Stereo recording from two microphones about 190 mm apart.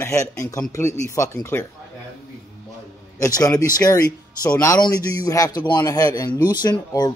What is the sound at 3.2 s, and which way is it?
Speech, 15° left (ahead or behind).